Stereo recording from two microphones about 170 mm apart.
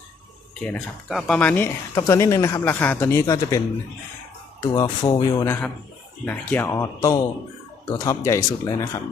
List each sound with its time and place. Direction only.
0.6 s speech: 5° left (ahead or behind)
4.6 s speech: 25° left (ahead or behind)